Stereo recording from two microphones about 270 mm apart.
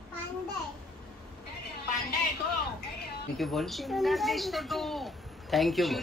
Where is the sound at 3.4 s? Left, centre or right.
Centre.